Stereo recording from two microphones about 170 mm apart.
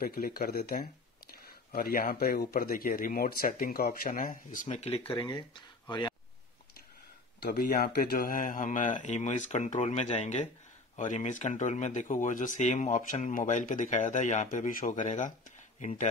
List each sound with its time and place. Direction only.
0.0 s speech: 60° left (ahead or behind); by 5.1 s 40° left (ahead or behind)
5.1 s speech: 25° left (ahead or behind)
7.4 s speech: 60° left (ahead or behind)